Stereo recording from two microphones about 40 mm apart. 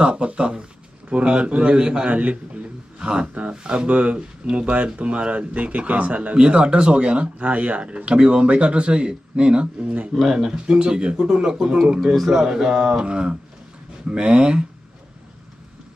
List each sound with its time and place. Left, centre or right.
0.0 s speech: right
2.0 s speech: right
3.0 s speech: right
6.3 s speech: right
7.3 s speech: right
10.2 s speech: centre